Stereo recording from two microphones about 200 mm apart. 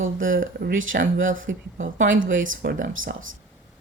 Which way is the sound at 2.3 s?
75° right (ahead or behind).